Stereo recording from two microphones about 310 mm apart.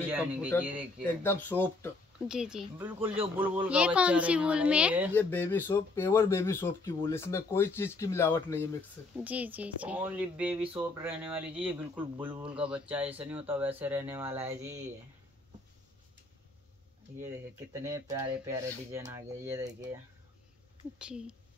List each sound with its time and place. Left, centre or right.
0.6 s speech: centre
1.0 s speech: centre
5.1 s speech: centre
9.1 s speech: centre
12.3 s speech: centre
12.5 s speech: centre
17.7 s speech: centre
21.0 s speech: centre